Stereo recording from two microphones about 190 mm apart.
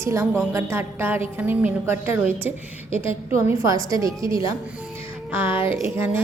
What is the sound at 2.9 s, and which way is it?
Speech, 30° left (ahead or behind).